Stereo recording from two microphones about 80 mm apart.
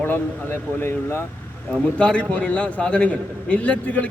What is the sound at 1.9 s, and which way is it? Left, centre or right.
A man's voice, centre.